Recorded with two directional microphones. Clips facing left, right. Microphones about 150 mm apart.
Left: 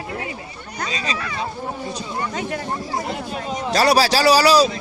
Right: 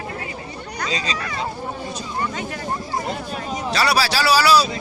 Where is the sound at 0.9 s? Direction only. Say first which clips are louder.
Right 1 dB; 20° right (ahead or behind).